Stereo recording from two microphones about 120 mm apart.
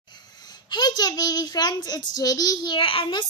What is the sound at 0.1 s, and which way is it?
A child's voice, 35° left (ahead or behind).